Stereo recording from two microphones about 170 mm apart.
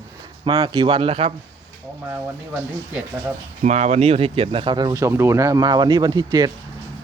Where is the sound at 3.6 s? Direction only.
45° right (ahead or behind).